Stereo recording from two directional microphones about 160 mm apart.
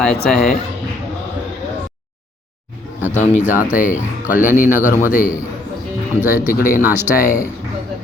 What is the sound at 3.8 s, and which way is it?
Speech, 10° right (ahead or behind).